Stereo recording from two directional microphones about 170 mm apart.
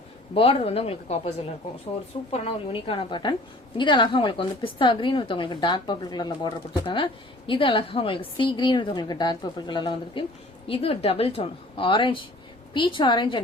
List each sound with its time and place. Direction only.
0.3 s a woman's voice: 35° left (ahead or behind)
2.3 s a woman's voice: 35° left (ahead or behind)